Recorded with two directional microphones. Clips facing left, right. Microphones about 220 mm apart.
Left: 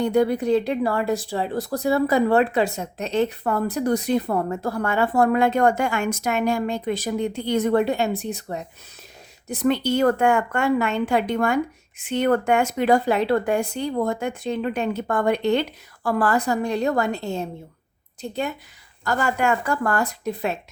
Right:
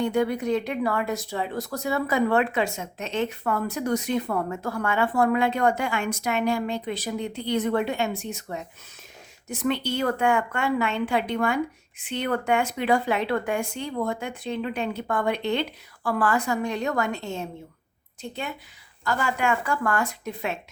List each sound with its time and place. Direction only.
0.0 s a woman's voice: 35° left (ahead or behind)